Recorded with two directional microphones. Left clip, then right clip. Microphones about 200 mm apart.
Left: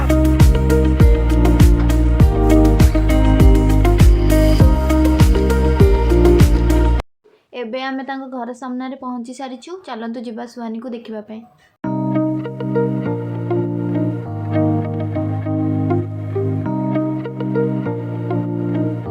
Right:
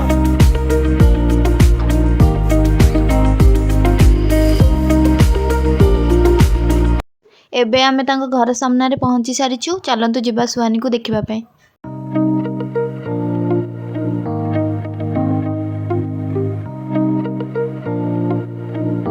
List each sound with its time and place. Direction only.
0.1 s music: centre (ahead or behind)
7.5 s a woman's voice: 55° right (ahead or behind)